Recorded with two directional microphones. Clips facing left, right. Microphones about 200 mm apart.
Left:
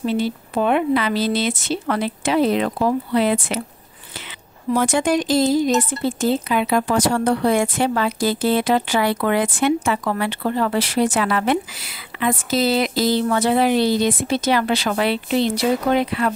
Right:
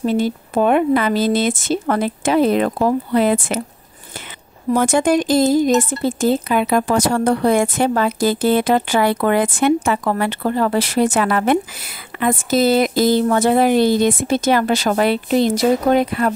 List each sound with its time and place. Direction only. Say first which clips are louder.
0.0 s speech: right 3 dB; 45° right (ahead or behind)
4.7 s speech: right 3 dB; 50° right (ahead or behind)